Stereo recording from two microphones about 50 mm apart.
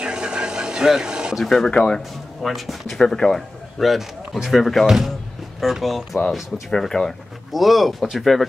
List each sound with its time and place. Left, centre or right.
0.0 s vehicle: centre
1.4 s speech: centre
2.4 s speech: centre
3.8 s speech: centre